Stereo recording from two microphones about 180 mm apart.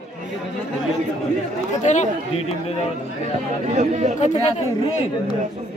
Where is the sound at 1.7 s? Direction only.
40° left (ahead or behind).